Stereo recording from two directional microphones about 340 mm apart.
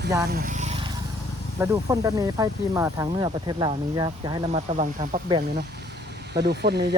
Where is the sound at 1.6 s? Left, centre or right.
Centre.